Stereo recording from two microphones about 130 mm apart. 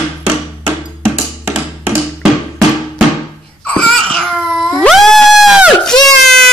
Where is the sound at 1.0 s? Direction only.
5° right (ahead or behind).